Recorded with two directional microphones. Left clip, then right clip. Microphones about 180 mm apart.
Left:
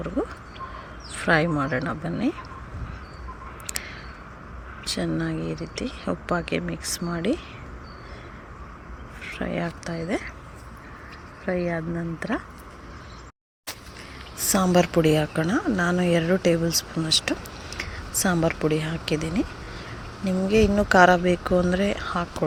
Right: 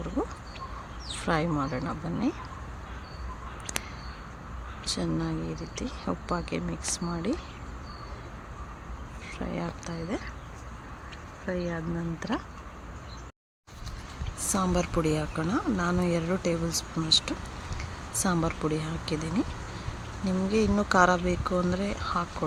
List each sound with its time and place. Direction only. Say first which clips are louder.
1.2 s speech: left 7 dB; 10° left (ahead or behind)
4.9 s speech: left 4 dB; 10° left (ahead or behind)
9.2 s speech: left 6 dB; 15° left (ahead or behind)
11.4 s speech: left 6 dB; 15° left (ahead or behind)
14.5 s speech: left 8 dB; 20° left (ahead or behind)